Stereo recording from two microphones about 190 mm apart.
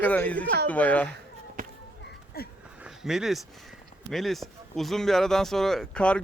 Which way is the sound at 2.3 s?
55° left (ahead or behind).